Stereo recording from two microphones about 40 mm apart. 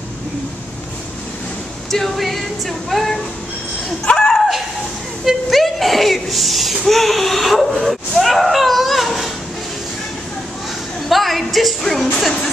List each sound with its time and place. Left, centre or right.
1.9 s speech: centre
4.0 s speech: left
5.2 s speech: centre
8.2 s a sound: centre
11.1 s music: centre